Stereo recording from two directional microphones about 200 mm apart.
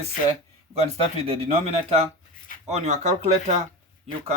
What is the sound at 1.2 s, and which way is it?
Speech, 30° right (ahead or behind).